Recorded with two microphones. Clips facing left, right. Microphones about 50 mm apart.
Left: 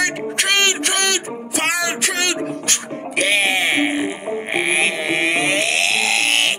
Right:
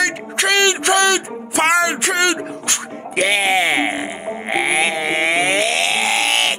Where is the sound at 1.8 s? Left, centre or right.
Right.